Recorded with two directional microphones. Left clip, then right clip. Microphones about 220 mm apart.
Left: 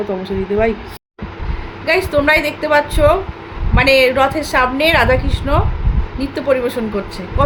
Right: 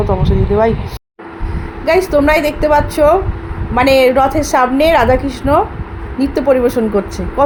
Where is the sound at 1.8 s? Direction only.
15° right (ahead or behind).